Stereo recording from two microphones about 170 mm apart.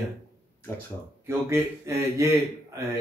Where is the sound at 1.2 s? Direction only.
15° right (ahead or behind).